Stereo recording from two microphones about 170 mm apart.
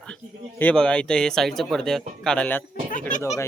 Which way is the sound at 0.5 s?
5° left (ahead or behind).